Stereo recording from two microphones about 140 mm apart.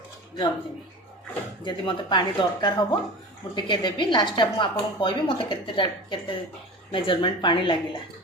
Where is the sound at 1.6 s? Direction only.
35° left (ahead or behind).